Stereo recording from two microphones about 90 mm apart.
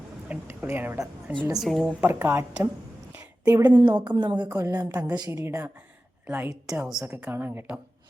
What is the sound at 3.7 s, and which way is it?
Speech, 55° right (ahead or behind).